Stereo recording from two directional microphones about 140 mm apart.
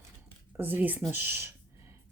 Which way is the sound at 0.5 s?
15° right (ahead or behind).